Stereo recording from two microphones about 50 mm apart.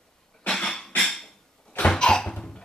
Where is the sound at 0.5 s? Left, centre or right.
Centre.